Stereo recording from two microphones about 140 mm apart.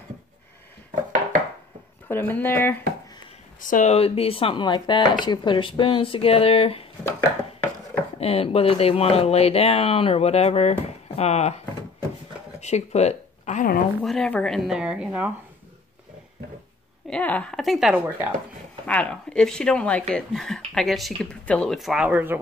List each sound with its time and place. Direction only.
2.0 s speech: 15° left (ahead or behind)
3.6 s speech: 70° left (ahead or behind)
3.9 s speech: 45° left (ahead or behind)
7.1 s a sound: 25° left (ahead or behind)
8.2 s speech: 45° left (ahead or behind); by 13.7 s 60° left (ahead or behind)
14.0 s speech: 5° left (ahead or behind)
17.1 s speech: 10° left (ahead or behind)
17.9 s speech: 10° right (ahead or behind)
18.9 s speech: 10° left (ahead or behind); by 22.4 s 15° right (ahead or behind)